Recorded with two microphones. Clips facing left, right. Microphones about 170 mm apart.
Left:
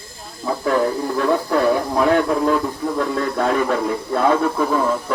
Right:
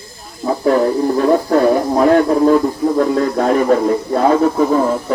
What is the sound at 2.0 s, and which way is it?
Radio, 40° right (ahead or behind).